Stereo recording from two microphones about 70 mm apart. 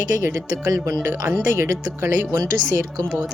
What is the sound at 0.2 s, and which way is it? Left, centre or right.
Speech, right.